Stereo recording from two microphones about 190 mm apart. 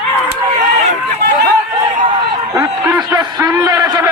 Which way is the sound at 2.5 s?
20° right (ahead or behind).